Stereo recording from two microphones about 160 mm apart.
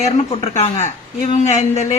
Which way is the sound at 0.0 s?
45° left (ahead or behind).